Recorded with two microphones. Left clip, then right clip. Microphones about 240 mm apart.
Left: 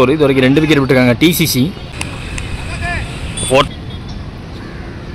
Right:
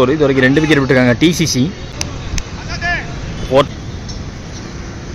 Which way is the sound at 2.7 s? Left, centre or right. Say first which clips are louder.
Right 4 dB; centre.